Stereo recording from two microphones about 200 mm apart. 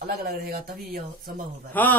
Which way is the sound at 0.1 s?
50° right (ahead or behind).